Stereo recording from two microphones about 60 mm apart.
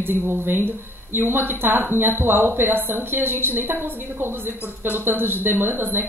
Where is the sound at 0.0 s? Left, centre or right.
Right.